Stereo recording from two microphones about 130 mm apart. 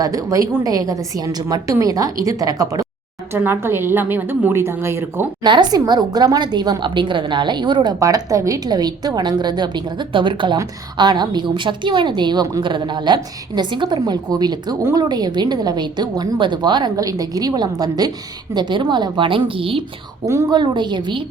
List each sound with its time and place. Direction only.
0.0 s a woman's voice: 25° right (ahead or behind)
3.3 s a woman's voice: 15° right (ahead or behind)
5.4 s a woman's voice: 35° right (ahead or behind)
14.8 s a woman's voice: 20° right (ahead or behind)
15.1 s a woman's voice: 35° right (ahead or behind)
20.2 s a woman's voice: 25° right (ahead or behind)
20.6 s a woman's voice: 35° right (ahead or behind)